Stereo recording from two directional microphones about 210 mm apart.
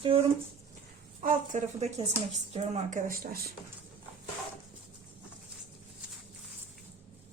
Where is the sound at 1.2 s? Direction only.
35° right (ahead or behind).